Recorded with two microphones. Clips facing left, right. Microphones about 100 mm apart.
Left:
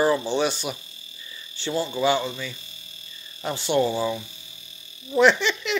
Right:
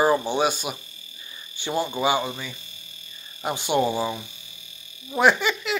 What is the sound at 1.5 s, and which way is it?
Speech, 15° right (ahead or behind).